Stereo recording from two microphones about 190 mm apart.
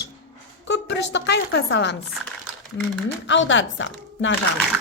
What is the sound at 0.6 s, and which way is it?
A woman's voice, 65° left (ahead or behind).